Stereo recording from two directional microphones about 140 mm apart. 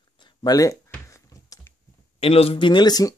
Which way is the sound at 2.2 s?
45° left (ahead or behind).